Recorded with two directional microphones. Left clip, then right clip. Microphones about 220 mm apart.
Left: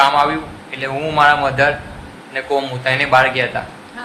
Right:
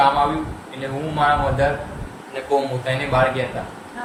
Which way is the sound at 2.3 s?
5° right (ahead or behind).